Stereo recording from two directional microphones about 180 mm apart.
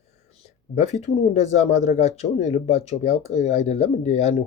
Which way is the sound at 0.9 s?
40° left (ahead or behind).